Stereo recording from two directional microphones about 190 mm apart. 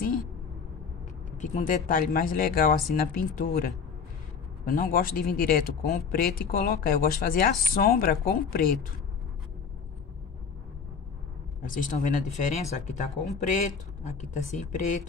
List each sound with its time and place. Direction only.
1.4 s speech: 40° left (ahead or behind)
11.6 s speech: 45° left (ahead or behind)